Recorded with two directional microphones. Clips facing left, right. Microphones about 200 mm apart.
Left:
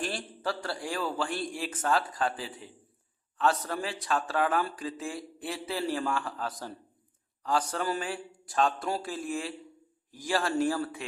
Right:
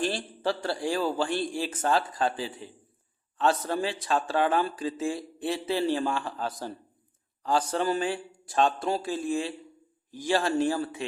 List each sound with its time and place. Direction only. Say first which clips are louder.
0.0 s speech: right 5 dB; 30° right (ahead or behind)